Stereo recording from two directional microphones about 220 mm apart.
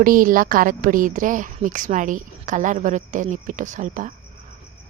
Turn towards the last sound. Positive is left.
turn(degrees=-35)  # may be behind; listen again after turning